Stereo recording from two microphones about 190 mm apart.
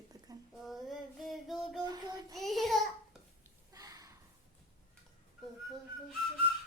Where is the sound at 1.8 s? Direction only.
20° right (ahead or behind).